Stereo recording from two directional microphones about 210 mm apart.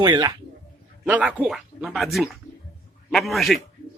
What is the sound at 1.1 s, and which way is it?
A man's voice, 5° right (ahead or behind).